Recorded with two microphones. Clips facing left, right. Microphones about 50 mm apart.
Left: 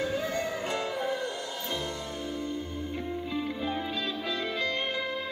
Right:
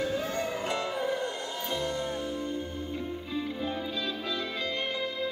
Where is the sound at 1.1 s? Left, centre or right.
Right.